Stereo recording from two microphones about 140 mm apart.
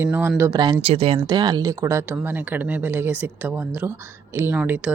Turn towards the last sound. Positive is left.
turn(degrees=-10)  # may be behind; listen again after turning